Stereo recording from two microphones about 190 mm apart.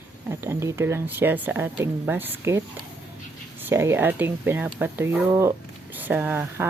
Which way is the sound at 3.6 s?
10° right (ahead or behind).